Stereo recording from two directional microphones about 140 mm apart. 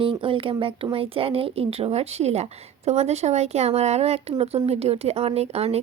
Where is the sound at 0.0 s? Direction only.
40° right (ahead or behind).